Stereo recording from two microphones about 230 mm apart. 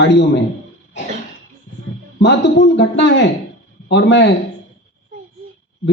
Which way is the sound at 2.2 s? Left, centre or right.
Left.